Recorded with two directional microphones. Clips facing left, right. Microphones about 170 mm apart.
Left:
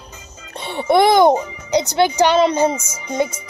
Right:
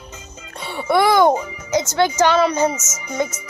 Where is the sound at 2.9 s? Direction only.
30° left (ahead or behind).